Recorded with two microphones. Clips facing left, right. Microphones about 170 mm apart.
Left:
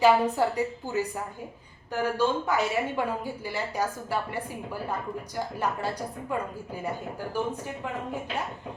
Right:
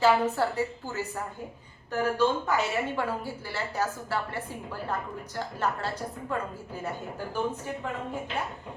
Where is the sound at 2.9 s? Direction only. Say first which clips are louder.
Left 1 dB; 15° left (ahead or behind).